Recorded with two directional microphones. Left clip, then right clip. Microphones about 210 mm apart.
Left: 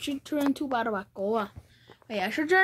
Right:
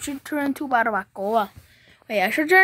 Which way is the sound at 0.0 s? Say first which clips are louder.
Right 3 dB; 25° right (ahead or behind).